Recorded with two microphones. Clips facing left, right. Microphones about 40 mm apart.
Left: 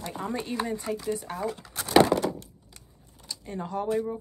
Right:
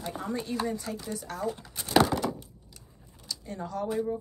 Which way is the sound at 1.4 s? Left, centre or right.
Left.